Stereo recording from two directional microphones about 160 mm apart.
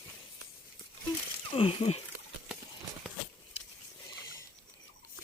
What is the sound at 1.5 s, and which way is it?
Speech, 35° left (ahead or behind).